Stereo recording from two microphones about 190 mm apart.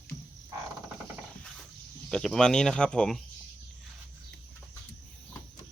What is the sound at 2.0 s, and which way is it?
Speech, 5° left (ahead or behind).